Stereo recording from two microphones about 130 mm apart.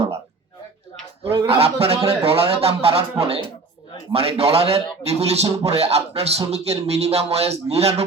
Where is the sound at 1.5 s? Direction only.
50° right (ahead or behind).